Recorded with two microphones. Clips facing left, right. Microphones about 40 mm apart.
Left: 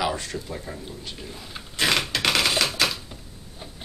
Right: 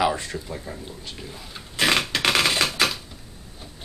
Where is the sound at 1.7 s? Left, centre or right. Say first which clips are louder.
Right 2 dB; centre.